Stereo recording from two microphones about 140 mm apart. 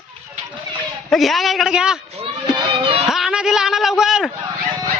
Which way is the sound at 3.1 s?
5° right (ahead or behind).